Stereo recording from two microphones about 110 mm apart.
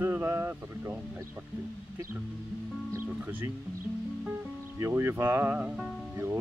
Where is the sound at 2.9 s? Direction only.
20° right (ahead or behind).